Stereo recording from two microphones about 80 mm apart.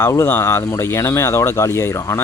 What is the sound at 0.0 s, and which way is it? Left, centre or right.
A man's voice, left.